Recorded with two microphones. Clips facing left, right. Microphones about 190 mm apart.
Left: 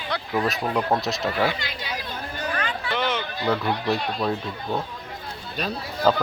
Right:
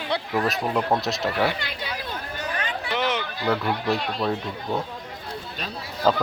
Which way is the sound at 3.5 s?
Centre (ahead or behind).